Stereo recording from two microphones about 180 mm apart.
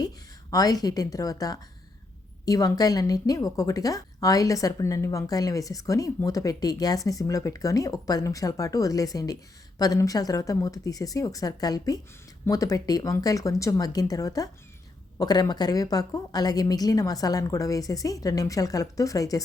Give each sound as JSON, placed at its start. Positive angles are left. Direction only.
{"t": 0.5, "sound": "a woman's voice", "side_deg": 20}